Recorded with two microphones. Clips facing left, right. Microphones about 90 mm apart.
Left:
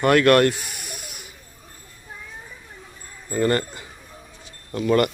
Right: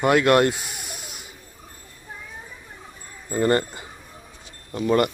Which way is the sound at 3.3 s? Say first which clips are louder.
Right 1 dB; 20° right (ahead or behind).